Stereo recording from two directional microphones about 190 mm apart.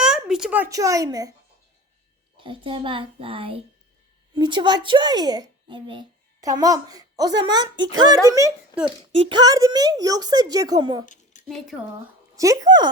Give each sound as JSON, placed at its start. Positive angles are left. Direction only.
{"t": 0.0, "sound": "speech", "side_deg": -5}
{"t": 2.4, "sound": "a child's voice", "side_deg": -25}
{"t": 11.0, "sound": "a sound", "side_deg": 40}
{"t": 11.4, "sound": "speech", "side_deg": 0}
{"t": 12.4, "sound": "a child's voice", "side_deg": -20}